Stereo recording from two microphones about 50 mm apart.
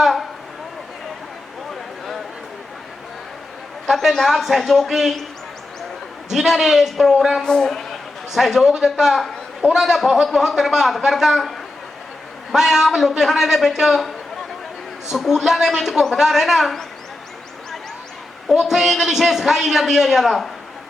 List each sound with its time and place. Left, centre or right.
0.0 s a sound: centre
3.8 s a sound: centre
4.3 s a man's voice: centre
6.3 s a man's voice: centre
7.4 s a man's voice: centre
7.7 s a sound: centre
8.3 s a man's voice: centre
12.5 s a man's voice: centre
15.1 s a man's voice: centre
18.5 s a man's voice: centre